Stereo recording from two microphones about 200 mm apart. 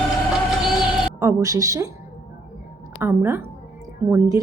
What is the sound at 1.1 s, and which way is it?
Speech, 15° right (ahead or behind).